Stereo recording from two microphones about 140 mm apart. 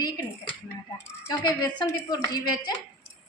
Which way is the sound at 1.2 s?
25° left (ahead or behind).